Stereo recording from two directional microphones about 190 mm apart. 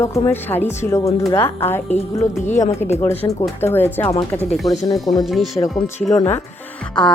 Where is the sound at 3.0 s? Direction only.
10° left (ahead or behind).